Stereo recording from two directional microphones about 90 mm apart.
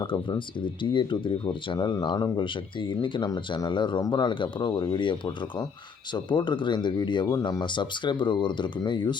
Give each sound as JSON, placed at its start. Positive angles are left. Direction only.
{"t": 0.0, "sound": "speech", "side_deg": 65}
{"t": 2.4, "sound": "speech", "side_deg": 65}
{"t": 3.2, "sound": "speech", "side_deg": 45}